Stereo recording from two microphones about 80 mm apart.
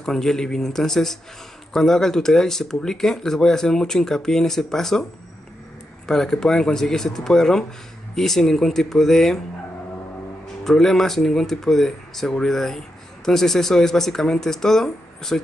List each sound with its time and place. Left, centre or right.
0.0 s speech: centre
6.0 s speech: centre
10.6 s speech: centre